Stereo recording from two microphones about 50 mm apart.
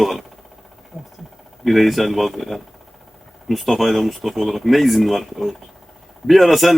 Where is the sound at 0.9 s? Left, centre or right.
Left.